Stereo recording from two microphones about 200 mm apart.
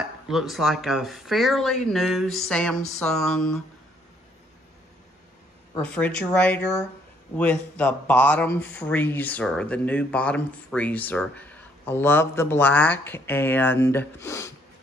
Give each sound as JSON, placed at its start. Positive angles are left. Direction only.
{"t": 0.0, "sound": "speech", "side_deg": 0}
{"t": 5.8, "sound": "speech", "side_deg": 5}